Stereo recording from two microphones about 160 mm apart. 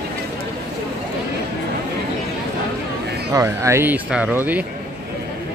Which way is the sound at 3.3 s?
20° right (ahead or behind).